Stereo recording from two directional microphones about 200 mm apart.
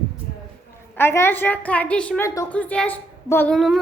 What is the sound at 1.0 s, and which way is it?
A woman's voice, 10° left (ahead or behind).